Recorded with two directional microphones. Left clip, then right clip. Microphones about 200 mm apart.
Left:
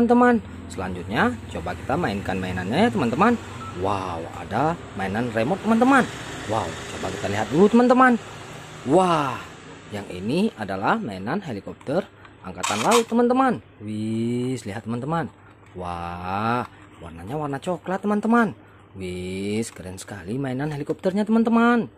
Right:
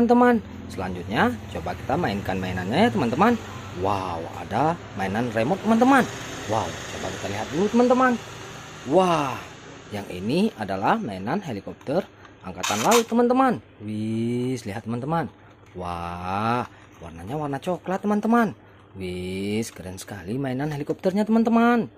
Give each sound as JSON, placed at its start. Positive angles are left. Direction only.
{"t": 0.0, "sound": "speech", "side_deg": 0}
{"t": 7.5, "sound": "speech", "side_deg": 40}
{"t": 8.9, "sound": "speech", "side_deg": 10}